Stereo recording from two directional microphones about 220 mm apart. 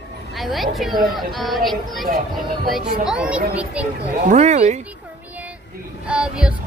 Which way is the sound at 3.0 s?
5° right (ahead or behind).